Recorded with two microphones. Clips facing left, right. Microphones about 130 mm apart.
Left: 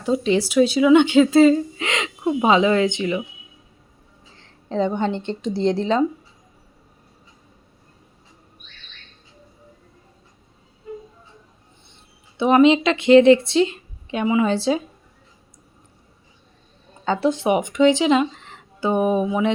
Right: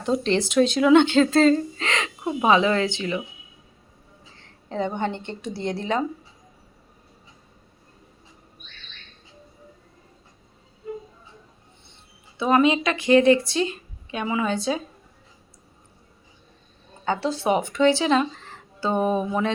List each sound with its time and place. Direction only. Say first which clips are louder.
0.0 s speech: left 3 dB; 5° left (ahead or behind)
4.4 s a sound: left 5 dB; 20° left (ahead or behind)
4.9 s speech: left 4 dB; 20° left (ahead or behind)
12.4 s speech: left 5 dB; 20° left (ahead or behind)
17.2 s speech: left 4 dB; 15° left (ahead or behind)